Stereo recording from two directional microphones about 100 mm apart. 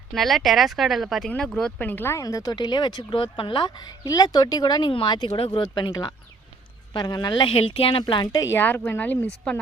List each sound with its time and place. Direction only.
0.1 s speech: centre (ahead or behind)
1.9 s speech: 20° left (ahead or behind)
2.2 s speech: 40° left (ahead or behind)
7.5 s a woman's voice: 65° left (ahead or behind)
8.5 s speech: 20° left (ahead or behind)